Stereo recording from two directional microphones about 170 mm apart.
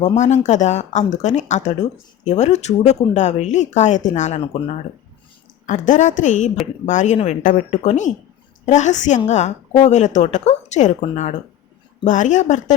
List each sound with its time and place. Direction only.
0.0 s speech: 40° left (ahead or behind)
5.6 s speech: 45° left (ahead or behind)